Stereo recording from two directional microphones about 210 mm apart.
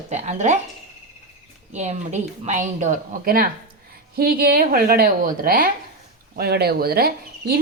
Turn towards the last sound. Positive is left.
turn(degrees=-45)  # may be behind; listen again after turning